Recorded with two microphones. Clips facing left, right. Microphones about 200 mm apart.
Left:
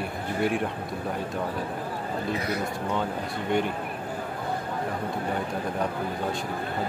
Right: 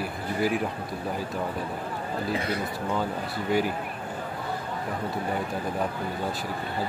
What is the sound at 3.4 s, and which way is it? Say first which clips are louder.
Speech: right 1 dB; 5° right (ahead or behind).